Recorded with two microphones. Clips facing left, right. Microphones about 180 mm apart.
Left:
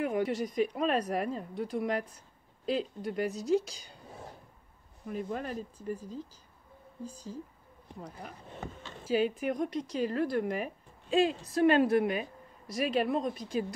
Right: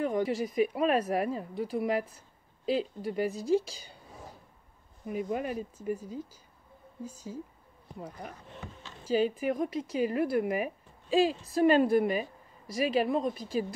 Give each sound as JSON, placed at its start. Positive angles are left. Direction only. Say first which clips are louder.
{"t": 0.0, "sound": "speech", "louder": "right 1 dB", "side_deg": 5}
{"t": 5.0, "sound": "speech", "louder": "right 3 dB", "side_deg": -10}
{"t": 7.1, "sound": "speech", "louder": "right 1 dB", "side_deg": -10}
{"t": 9.0, "sound": "speech", "louder": "right 1 dB", "side_deg": 0}